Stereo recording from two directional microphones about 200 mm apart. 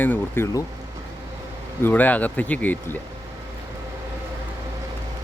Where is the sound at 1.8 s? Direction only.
10° left (ahead or behind).